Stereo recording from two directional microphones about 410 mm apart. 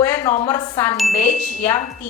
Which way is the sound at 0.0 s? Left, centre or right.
Centre.